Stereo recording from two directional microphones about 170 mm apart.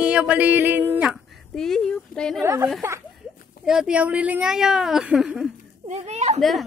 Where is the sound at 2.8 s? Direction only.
15° right (ahead or behind).